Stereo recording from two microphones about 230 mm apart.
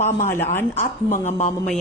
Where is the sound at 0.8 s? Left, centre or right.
Left.